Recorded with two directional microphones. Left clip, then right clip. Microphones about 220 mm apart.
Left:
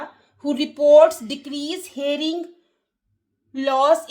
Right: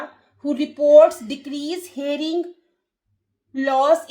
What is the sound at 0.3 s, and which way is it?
A woman's voice, 40° left (ahead or behind).